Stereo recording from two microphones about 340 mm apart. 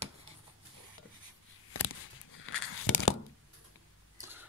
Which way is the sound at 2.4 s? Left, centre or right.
Left.